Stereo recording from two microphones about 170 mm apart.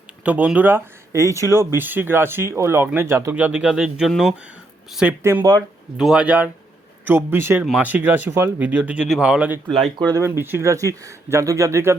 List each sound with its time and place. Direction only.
0.3 s speech: 10° right (ahead or behind)
5.4 s speech: 25° right (ahead or behind)
6.0 s speech: 5° right (ahead or behind)
10.1 s speech: 15° right (ahead or behind)